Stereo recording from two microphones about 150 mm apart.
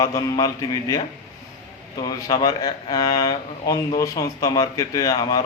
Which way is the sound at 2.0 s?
25° left (ahead or behind).